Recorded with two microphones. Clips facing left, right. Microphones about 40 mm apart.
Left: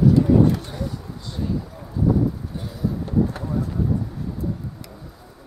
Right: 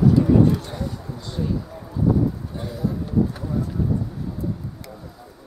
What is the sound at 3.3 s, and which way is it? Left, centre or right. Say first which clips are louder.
Vehicle: even; centre.